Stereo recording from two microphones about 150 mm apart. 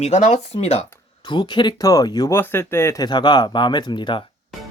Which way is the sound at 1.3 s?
30° left (ahead or behind).